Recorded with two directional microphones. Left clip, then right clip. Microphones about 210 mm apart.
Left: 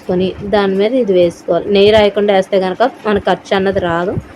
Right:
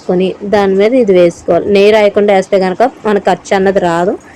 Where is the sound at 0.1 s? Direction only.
15° right (ahead or behind).